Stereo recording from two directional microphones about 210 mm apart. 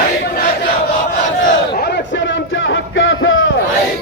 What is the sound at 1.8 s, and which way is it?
Music, 50° left (ahead or behind).